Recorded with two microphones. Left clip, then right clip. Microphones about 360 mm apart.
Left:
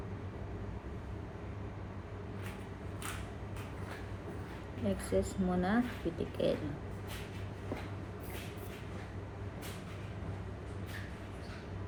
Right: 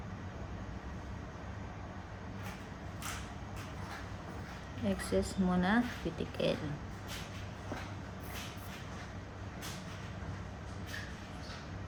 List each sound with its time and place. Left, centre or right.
4.9 s a woman's voice: right